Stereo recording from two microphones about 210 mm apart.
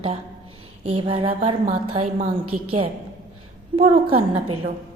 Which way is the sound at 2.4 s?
90° right.